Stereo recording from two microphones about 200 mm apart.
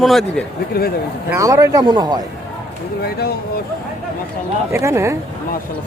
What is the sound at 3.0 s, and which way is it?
Speech, 50° left (ahead or behind).